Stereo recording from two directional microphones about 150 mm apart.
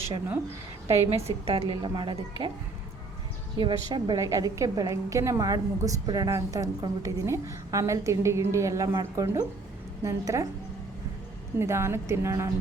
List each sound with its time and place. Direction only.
1.1 s speech: 40° right (ahead or behind)
3.6 s a woman's voice: 30° right (ahead or behind)
11.6 s speech: 15° right (ahead or behind)